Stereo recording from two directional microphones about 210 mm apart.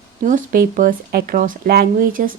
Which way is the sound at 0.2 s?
40° right (ahead or behind).